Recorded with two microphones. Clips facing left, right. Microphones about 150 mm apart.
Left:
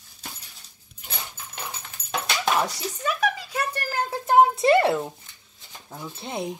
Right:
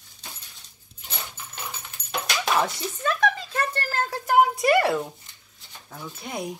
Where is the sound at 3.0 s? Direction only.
10° left (ahead or behind).